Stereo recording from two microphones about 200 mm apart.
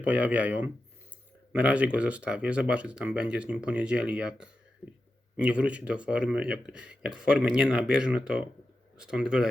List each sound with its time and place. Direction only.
0.0 s speech: 5° right (ahead or behind)